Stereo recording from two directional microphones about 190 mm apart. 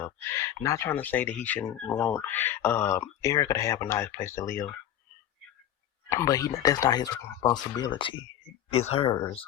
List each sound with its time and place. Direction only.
0.3 s speech: 15° left (ahead or behind)
6.1 s speech: 15° left (ahead or behind)